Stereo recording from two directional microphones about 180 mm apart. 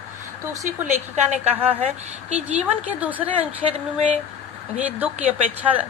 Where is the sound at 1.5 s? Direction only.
10° right (ahead or behind).